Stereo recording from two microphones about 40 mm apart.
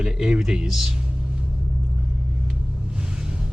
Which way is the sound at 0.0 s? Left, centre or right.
Centre.